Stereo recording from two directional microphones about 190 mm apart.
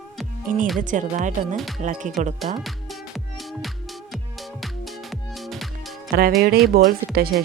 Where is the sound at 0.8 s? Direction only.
40° right (ahead or behind).